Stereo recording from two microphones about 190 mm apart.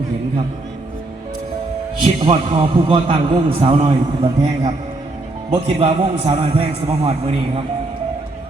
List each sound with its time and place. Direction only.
2.2 s a man's voice: 25° right (ahead or behind)